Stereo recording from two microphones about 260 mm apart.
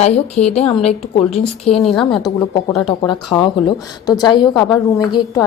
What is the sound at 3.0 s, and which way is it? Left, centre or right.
A woman's voice, centre.